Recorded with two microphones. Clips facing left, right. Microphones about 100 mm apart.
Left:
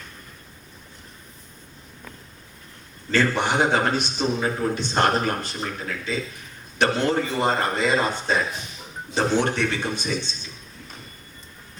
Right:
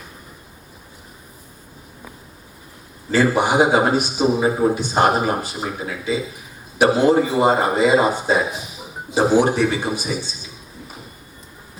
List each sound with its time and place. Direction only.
3.1 s a man's voice: 10° right (ahead or behind)